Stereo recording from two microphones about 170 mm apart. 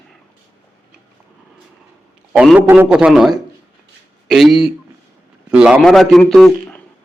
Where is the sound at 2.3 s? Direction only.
5° right (ahead or behind).